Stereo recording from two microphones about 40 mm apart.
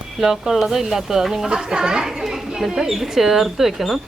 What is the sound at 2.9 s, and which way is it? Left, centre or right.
Speech, centre.